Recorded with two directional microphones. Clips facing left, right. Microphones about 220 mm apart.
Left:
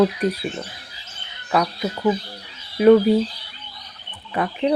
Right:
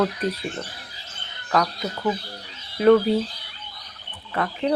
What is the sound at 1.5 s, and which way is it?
Speech, 10° left (ahead or behind).